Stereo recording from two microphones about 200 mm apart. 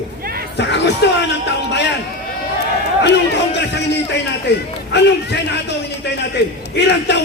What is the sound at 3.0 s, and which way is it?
Music, 60° left (ahead or behind).